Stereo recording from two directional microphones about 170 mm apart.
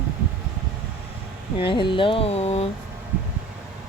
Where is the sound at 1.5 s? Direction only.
30° left (ahead or behind).